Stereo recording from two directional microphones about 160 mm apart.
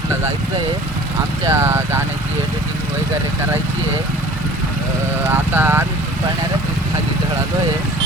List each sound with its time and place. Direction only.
1.5 s speech: 15° right (ahead or behind)
5.3 s speech: 10° right (ahead or behind)